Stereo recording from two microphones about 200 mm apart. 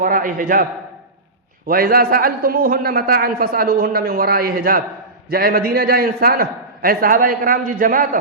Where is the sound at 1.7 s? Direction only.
50° right (ahead or behind).